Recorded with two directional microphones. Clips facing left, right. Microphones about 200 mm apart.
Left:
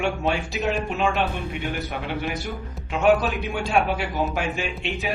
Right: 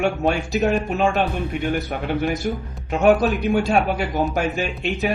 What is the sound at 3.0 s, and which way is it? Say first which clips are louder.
A man's voice: right 3 dB; 40° right (ahead or behind).